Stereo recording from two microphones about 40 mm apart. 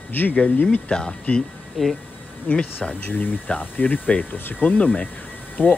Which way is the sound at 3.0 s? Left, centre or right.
Left.